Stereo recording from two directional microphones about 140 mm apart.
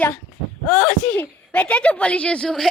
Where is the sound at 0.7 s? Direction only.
5° left (ahead or behind).